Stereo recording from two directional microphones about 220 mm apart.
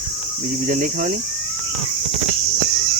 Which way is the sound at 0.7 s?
35° right (ahead or behind).